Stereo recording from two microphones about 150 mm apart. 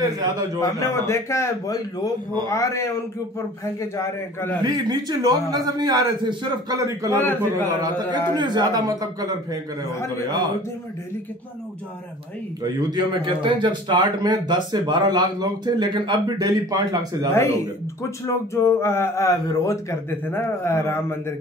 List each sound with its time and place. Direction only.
0.6 s a man's voice: 20° left (ahead or behind)
3.9 s speech: 15° left (ahead or behind)
4.6 s a man's voice: 30° right (ahead or behind)
7.2 s speech: 15° left (ahead or behind)
7.8 s a man's voice: 25° right (ahead or behind)
12.9 s a man's voice: 35° right (ahead or behind)
18.2 s speech: 15° left (ahead or behind)